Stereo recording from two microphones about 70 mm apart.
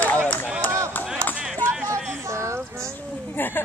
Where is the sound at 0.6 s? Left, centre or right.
Right.